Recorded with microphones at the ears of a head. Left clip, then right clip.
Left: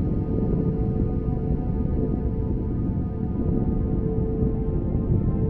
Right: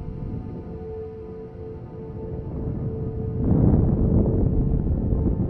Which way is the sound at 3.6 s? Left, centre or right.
Right.